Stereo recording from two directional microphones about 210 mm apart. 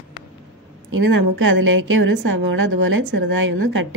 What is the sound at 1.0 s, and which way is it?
A woman's voice, 60° right (ahead or behind).